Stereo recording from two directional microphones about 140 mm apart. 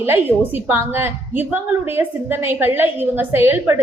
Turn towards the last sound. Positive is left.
turn(degrees=-15)  # may be behind; listen again after turning